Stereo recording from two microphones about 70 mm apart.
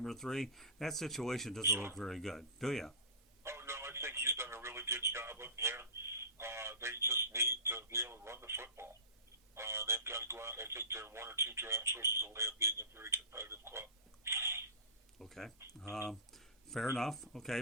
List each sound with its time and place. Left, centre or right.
0.0 s speech: centre
1.6 s speech: right
2.0 s speech: centre
3.4 s a sound: right
9.6 s speech: right
14.3 s a sound: right
15.2 s speech: centre
16.0 s a sound: centre
17.0 s speech: centre